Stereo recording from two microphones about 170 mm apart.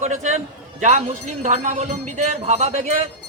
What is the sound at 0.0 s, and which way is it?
A man's voice, 45° right (ahead or behind).